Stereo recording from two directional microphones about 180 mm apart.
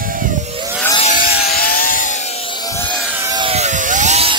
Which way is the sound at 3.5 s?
40° right (ahead or behind).